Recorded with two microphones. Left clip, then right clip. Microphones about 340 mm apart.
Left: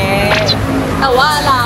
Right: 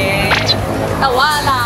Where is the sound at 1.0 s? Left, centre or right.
Centre.